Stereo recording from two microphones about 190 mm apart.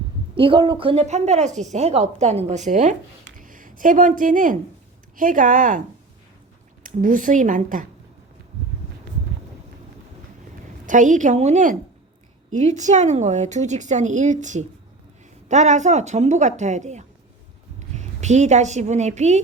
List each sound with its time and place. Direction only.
0.3 s a woman's voice: 25° right (ahead or behind); by 5.8 s 45° right (ahead or behind)
6.8 s speech: 45° right (ahead or behind)
10.8 s a woman's voice: 40° right (ahead or behind)